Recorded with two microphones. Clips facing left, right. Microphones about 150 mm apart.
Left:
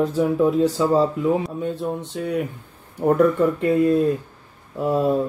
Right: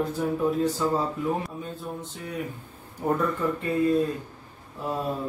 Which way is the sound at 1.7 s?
75° left (ahead or behind).